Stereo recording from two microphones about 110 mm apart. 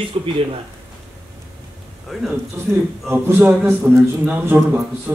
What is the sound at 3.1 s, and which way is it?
A man's voice, 20° right (ahead or behind).